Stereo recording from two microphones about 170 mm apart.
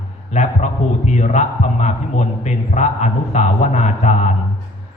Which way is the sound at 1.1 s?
45° left (ahead or behind).